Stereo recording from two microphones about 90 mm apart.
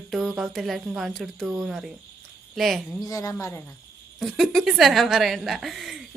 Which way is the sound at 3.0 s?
35° left (ahead or behind).